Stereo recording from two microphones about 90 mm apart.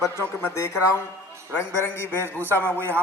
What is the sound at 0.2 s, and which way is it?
Speech, 25° left (ahead or behind).